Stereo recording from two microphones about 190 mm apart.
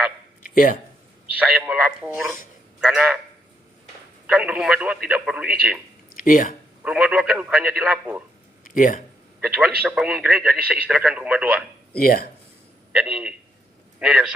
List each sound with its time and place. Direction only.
0.4 s a sound: 45° left (ahead or behind)
1.3 s speech: 5° right (ahead or behind)
4.3 s speech: 5° right (ahead or behind)
6.1 s speech: 45° left (ahead or behind)
6.8 s speech: 5° right (ahead or behind)
8.6 s speech: 45° left (ahead or behind)
9.8 s speech: 5° right (ahead or behind)
11.9 s speech: 50° left (ahead or behind)
12.9 s a man's voice: 10° right (ahead or behind)